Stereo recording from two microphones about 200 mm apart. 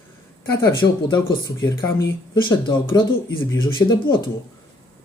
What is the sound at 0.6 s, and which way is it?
Speech, 20° left (ahead or behind).